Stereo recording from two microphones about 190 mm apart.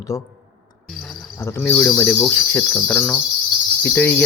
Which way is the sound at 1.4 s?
15° left (ahead or behind).